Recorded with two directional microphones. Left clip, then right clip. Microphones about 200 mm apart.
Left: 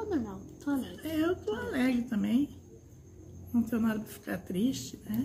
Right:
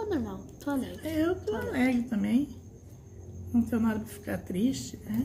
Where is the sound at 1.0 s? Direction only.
15° left (ahead or behind).